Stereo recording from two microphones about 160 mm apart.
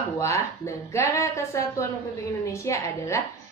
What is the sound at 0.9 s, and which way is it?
A woman's voice, 20° left (ahead or behind).